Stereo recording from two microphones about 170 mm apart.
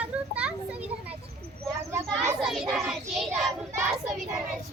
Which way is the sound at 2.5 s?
Centre (ahead or behind).